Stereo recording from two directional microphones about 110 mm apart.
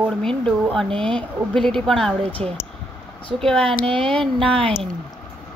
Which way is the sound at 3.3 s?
5° left (ahead or behind).